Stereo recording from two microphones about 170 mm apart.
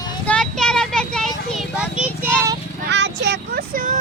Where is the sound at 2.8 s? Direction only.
90° right; by 4.0 s 55° right (ahead or behind).